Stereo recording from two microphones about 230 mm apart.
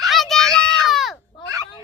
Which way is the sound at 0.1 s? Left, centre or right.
Centre.